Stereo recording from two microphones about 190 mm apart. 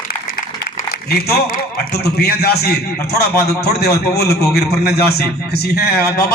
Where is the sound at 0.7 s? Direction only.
55° left (ahead or behind).